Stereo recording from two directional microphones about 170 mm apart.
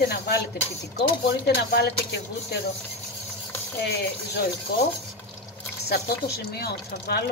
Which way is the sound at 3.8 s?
75° left (ahead or behind).